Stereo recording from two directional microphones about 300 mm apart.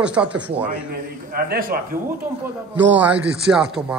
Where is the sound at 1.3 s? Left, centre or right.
Right.